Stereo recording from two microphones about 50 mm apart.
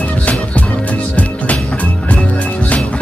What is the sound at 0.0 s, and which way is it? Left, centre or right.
Music, left.